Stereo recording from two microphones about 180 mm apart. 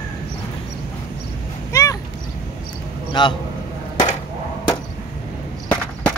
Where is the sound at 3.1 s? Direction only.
25° left (ahead or behind).